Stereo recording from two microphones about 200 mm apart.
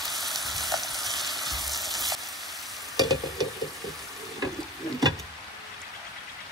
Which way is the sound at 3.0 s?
20° right (ahead or behind).